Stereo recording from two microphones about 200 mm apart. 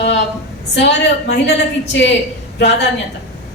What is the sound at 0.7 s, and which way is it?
A woman's voice, 60° left (ahead or behind).